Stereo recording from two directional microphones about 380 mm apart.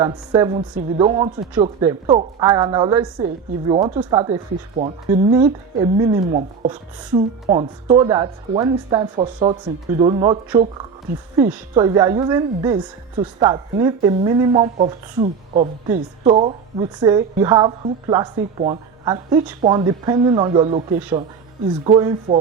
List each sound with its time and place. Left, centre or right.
0.0 s a woman's voice: centre
21.8 s a woman's voice: centre